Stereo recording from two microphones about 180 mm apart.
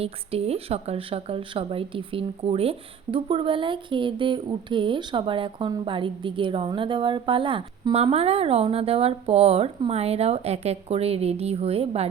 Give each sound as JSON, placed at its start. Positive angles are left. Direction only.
{"t": 0.0, "sound": "speech", "side_deg": -35}